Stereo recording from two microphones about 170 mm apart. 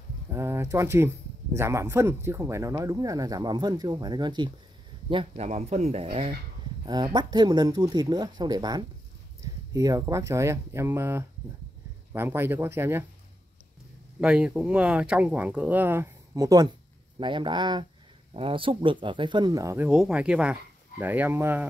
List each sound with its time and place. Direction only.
0.3 s speech: 15° right (ahead or behind); by 6.0 s 40° right (ahead or behind)
6.9 s speech: 25° right (ahead or behind)
14.2 s speech: 5° right (ahead or behind)
19.9 s speech: 5° right (ahead or behind)